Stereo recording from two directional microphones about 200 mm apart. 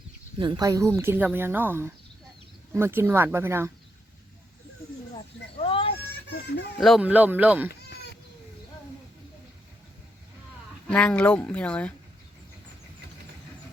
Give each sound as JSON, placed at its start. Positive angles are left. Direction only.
{"t": 0.3, "sound": "speech", "side_deg": -25}
{"t": 5.1, "sound": "a sound", "side_deg": 25}
{"t": 6.7, "sound": "speech", "side_deg": 0}
{"t": 10.8, "sound": "speech", "side_deg": 5}